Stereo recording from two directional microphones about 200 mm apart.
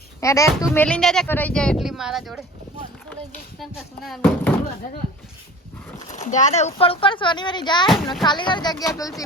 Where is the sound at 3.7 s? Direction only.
Centre (ahead or behind).